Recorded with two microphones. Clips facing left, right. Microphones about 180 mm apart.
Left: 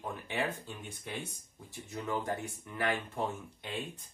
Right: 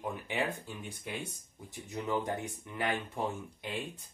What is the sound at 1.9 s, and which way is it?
Speech, 20° right (ahead or behind).